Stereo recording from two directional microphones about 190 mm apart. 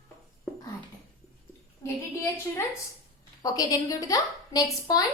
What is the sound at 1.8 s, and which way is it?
A woman's voice, 15° left (ahead or behind).